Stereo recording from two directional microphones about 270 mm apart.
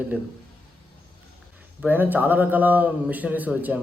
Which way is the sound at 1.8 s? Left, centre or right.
Centre.